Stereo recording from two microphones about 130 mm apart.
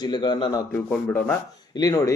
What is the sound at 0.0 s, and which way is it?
Speech, 35° left (ahead or behind).